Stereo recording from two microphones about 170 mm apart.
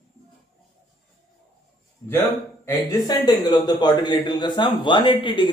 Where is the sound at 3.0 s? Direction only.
25° left (ahead or behind).